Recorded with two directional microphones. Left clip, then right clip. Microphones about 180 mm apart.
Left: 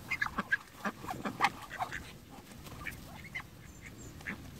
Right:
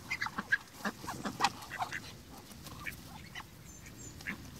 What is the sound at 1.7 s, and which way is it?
Duck, 50° left (ahead or behind).